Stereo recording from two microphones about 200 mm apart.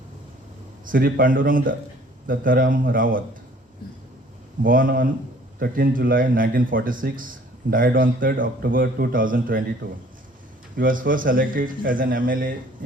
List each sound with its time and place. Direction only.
0.9 s a man's voice: 45° right (ahead or behind)
4.6 s a man's voice: 45° right (ahead or behind)
10.8 s a man's voice: 45° right (ahead or behind)